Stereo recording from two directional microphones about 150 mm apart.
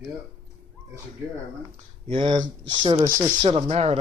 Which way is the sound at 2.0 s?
35° right (ahead or behind).